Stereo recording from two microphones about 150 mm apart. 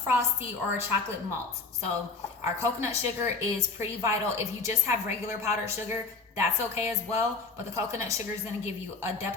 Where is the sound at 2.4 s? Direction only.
20° right (ahead or behind).